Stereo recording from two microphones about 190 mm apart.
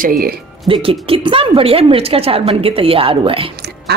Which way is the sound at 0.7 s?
30° right (ahead or behind).